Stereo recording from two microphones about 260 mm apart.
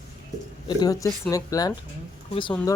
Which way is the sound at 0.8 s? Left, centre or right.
Centre.